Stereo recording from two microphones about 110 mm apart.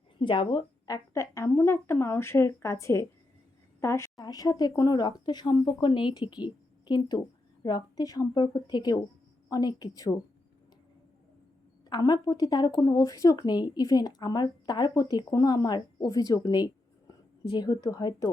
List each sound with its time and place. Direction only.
0.2 s a woman's voice: 45° left (ahead or behind)
0.9 s a woman's voice: 30° left (ahead or behind)
11.9 s speech: 35° left (ahead or behind)